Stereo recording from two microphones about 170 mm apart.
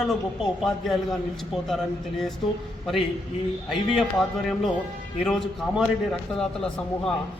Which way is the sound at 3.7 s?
Centre (ahead or behind).